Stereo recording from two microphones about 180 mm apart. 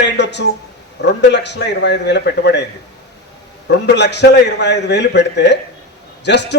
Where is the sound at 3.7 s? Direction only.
70° left (ahead or behind).